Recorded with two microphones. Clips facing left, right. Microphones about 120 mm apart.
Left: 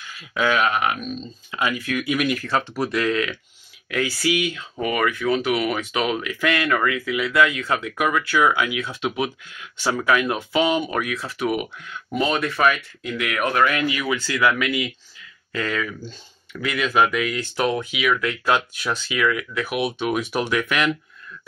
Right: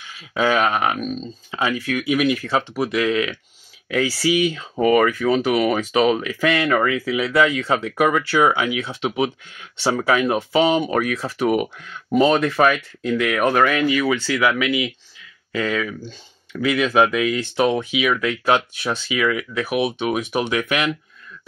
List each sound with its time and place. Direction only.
0.2 s speech: 30° right (ahead or behind)
1.5 s speech: 25° right (ahead or behind)
4.2 s speech: 30° right (ahead or behind)
6.1 s speech: 25° right (ahead or behind)
14.4 s speech: 15° right (ahead or behind)